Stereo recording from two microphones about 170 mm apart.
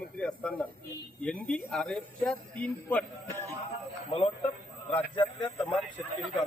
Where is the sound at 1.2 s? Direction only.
5° left (ahead or behind).